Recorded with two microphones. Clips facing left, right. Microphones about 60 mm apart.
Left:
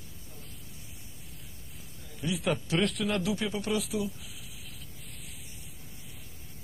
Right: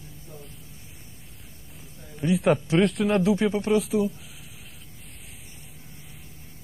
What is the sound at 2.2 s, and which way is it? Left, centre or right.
Speech, right.